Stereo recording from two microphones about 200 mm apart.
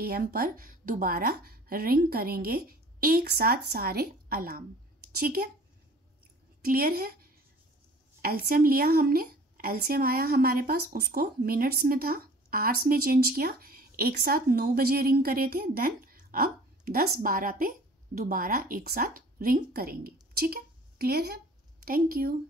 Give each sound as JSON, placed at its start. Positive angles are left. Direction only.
{"t": 0.0, "sound": "a woman's voice", "side_deg": -50}
{"t": 6.6, "sound": "a woman's voice", "side_deg": -50}
{"t": 8.2, "sound": "a woman's voice", "side_deg": -50}